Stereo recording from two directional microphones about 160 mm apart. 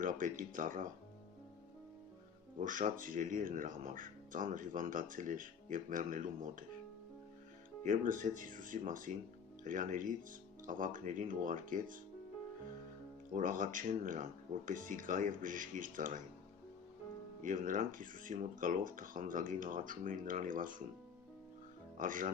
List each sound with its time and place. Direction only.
0.0 s speech: 55° right (ahead or behind)
2.6 s speech: 55° right (ahead or behind)
7.9 s speech: 55° right (ahead or behind)
13.3 s speech: 55° right (ahead or behind)
17.4 s speech: 55° right (ahead or behind)
21.9 s speech: 55° right (ahead or behind)